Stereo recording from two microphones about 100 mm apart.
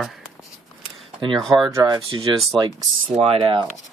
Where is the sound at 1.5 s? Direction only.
15° right (ahead or behind).